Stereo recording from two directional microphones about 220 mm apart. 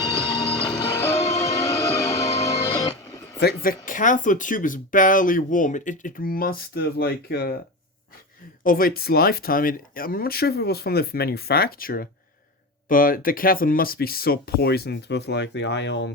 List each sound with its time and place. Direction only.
0.2 s music: 5° left (ahead or behind)
1.1 s music: 15° left (ahead or behind)
3.4 s speech: 40° left (ahead or behind)
8.6 s speech: 40° left (ahead or behind)